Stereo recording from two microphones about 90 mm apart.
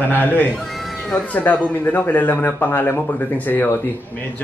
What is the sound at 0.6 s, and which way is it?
Cat, centre (ahead or behind).